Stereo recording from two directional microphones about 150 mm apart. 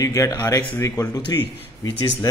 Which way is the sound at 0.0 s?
20° left (ahead or behind).